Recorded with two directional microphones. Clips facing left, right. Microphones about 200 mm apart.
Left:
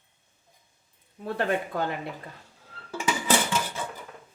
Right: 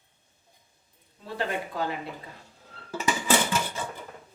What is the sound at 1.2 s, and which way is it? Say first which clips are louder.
Speech: left 4 dB; 55° left (ahead or behind).